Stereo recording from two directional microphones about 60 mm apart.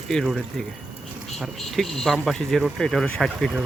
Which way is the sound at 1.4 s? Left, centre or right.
Centre.